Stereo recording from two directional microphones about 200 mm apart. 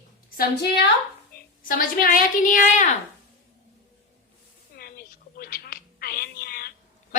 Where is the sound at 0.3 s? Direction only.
55° left (ahead or behind).